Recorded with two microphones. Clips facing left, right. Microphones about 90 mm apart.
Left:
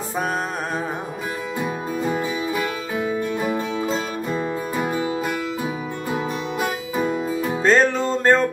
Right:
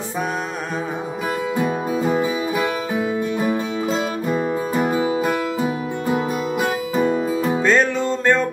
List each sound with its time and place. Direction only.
2.0 s music: 15° right (ahead or behind)
6.6 s music: centre (ahead or behind)
7.6 s music: 35° left (ahead or behind)